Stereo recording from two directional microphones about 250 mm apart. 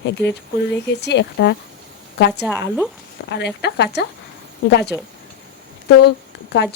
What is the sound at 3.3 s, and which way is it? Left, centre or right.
Speech, left.